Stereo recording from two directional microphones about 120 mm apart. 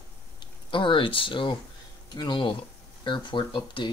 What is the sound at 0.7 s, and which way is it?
Speech, 45° left (ahead or behind).